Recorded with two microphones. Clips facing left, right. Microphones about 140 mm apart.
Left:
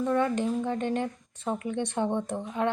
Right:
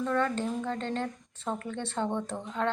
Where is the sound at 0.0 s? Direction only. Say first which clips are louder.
Left 3 dB; 15° left (ahead or behind).